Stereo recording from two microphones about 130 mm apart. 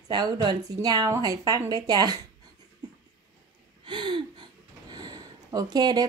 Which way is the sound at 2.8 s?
35° right (ahead or behind).